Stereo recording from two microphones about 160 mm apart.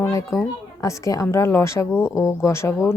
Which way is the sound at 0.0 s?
20° left (ahead or behind).